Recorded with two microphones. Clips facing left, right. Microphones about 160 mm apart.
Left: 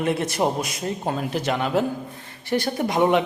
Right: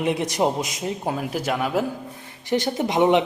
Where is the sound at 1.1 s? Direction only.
5° right (ahead or behind).